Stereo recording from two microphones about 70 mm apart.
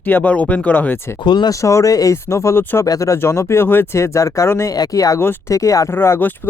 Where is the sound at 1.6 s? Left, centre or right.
Left.